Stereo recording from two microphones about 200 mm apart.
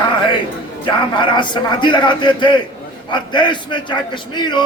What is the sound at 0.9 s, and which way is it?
A man's voice, 25° left (ahead or behind).